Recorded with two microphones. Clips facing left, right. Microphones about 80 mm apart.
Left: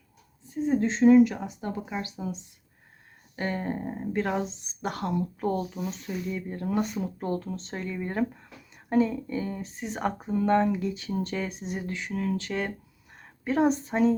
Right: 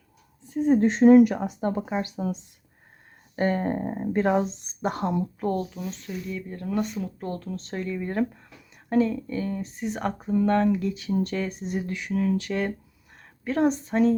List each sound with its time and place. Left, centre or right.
0.5 s speech: right
3.3 s speech: right
5.4 s speech: centre
7.5 s speech: centre